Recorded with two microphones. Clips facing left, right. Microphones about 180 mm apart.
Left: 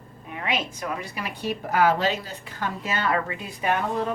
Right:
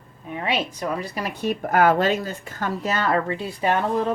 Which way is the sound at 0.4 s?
35° right (ahead or behind).